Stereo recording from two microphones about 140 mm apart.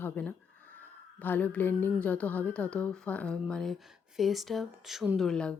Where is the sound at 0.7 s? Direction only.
15° left (ahead or behind).